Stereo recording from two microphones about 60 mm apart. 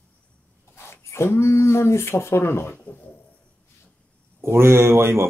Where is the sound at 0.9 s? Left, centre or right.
Left.